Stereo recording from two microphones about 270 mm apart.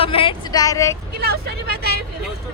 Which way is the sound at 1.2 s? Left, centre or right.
Right.